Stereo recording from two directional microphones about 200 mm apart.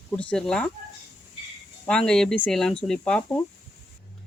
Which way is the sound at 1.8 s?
5° left (ahead or behind).